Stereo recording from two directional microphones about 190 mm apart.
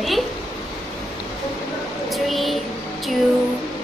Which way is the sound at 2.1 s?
Centre (ahead or behind).